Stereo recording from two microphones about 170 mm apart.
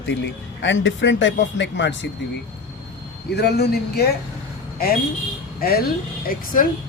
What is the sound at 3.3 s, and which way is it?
Speech, 75° left (ahead or behind).